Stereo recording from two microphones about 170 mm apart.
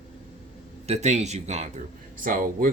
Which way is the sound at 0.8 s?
40° right (ahead or behind).